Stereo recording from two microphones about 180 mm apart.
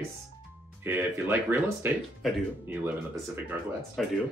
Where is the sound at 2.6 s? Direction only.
10° right (ahead or behind).